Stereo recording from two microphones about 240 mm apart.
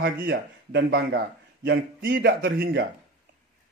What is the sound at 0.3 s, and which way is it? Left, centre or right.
Speech, right.